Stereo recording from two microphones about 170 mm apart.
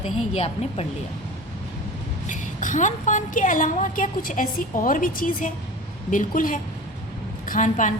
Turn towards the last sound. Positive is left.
turn(degrees=45)  # may be behind; listen again after turning